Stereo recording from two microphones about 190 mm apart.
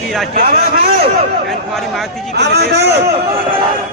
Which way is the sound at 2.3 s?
60° right (ahead or behind).